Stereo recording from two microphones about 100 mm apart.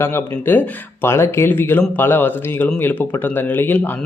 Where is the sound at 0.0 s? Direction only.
20° left (ahead or behind).